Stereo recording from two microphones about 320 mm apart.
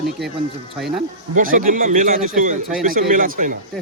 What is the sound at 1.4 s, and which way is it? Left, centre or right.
Speech, right.